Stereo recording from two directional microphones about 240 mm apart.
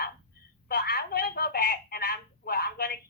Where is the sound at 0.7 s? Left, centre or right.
Left.